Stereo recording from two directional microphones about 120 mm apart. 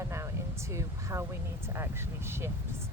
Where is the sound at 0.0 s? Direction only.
25° right (ahead or behind).